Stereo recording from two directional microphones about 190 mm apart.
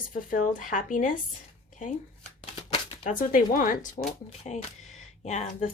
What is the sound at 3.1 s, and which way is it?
Speech, 45° left (ahead or behind).